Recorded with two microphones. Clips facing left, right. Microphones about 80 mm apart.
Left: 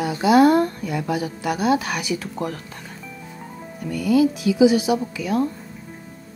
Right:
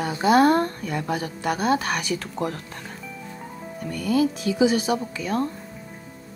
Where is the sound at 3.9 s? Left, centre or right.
Centre.